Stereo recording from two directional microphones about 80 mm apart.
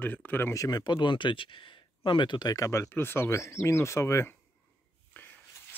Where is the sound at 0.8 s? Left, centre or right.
Left.